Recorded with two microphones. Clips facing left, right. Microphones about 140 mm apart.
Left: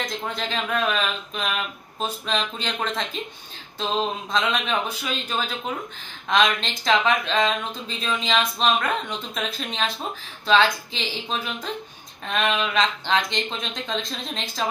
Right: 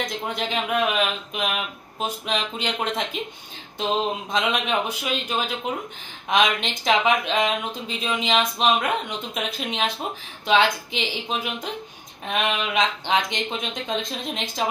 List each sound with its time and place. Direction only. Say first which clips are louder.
0.0 s speech: right 1 dB; 20° right (ahead or behind)